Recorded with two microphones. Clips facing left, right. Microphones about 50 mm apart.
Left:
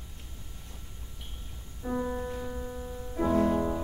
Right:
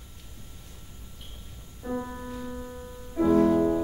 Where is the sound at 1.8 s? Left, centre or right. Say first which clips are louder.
Left 1 dB; centre.